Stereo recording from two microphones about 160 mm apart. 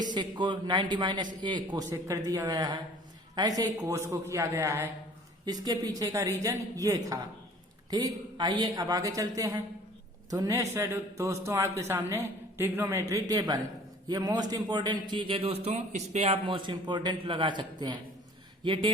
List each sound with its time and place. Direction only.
0.1 s a woman's voice: 30° right (ahead or behind); by 16.4 s 45° right (ahead or behind)
16.5 s a woman's voice: 30° right (ahead or behind)